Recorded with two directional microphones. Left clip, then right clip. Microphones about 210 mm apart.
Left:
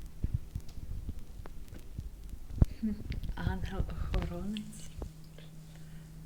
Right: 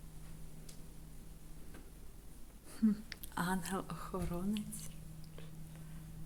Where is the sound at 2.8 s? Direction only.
40° right (ahead or behind).